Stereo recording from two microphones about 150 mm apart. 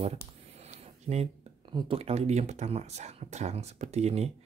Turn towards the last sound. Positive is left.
turn(degrees=-45)  # may be behind; listen again after turning